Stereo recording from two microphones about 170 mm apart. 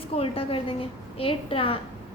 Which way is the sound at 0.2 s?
35° left (ahead or behind).